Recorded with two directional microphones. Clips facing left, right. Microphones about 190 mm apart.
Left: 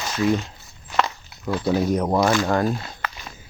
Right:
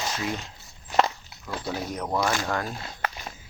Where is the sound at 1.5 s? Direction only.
45° left (ahead or behind).